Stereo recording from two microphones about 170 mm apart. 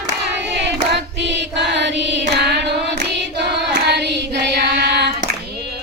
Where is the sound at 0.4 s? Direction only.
90° right.